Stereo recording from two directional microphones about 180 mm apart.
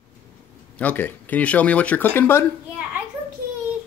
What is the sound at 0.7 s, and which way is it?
Speech, 10° left (ahead or behind).